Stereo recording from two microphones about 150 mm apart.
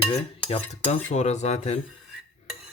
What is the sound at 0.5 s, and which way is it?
Cutlery, 45° left (ahead or behind).